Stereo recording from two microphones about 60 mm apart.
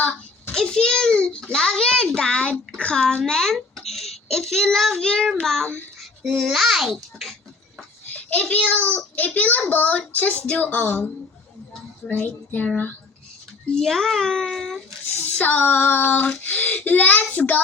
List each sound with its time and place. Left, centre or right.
0.0 s a sound: left
0.5 s a child's voice: centre
8.1 s a child's voice: left
12.2 s a child's voice: left
13.7 s a child's voice: centre
15.2 s child singing: left
16.4 s a child's voice: left